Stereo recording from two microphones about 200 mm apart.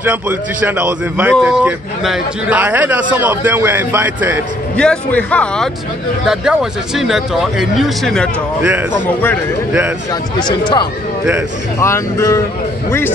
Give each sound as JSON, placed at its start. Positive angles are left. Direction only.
{"t": 0.0, "sound": "a man's voice", "side_deg": -10}
{"t": 4.7, "sound": "speech", "side_deg": 5}
{"t": 9.7, "sound": "a man's voice", "side_deg": -5}
{"t": 10.4, "sound": "speech", "side_deg": 20}